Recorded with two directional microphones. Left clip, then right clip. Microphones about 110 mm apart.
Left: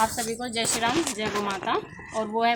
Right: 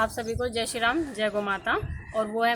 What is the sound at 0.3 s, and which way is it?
Speech, 35° right (ahead or behind).